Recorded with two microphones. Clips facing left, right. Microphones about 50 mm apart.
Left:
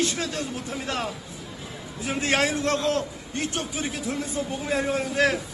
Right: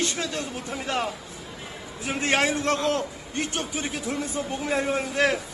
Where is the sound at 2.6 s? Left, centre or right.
Right.